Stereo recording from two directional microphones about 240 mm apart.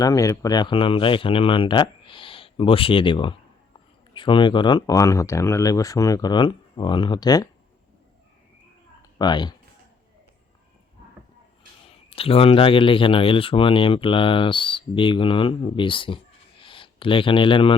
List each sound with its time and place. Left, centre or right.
0.0 s speech: centre
9.0 s a sound: centre
12.1 s speech: left